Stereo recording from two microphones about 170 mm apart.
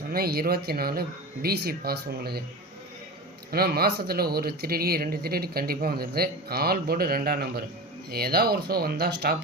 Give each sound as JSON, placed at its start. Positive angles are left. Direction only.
{"t": 0.1, "sound": "speech", "side_deg": -65}
{"t": 3.5, "sound": "speech", "side_deg": -65}